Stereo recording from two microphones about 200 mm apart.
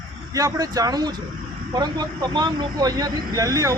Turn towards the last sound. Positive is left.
turn(degrees=-15)  # may be behind; listen again after turning